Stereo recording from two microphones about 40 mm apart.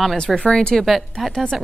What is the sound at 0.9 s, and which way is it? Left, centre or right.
Speech, centre.